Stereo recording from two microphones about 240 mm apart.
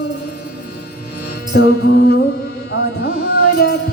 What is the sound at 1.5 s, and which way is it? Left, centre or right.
Music, left.